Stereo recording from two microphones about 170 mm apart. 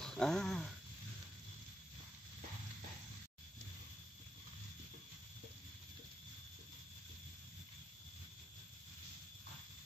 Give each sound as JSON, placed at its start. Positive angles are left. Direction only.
{"t": 0.0, "sound": "speech", "side_deg": 5}